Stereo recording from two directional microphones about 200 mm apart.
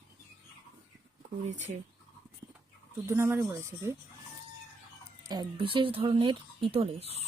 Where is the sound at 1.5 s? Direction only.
35° right (ahead or behind).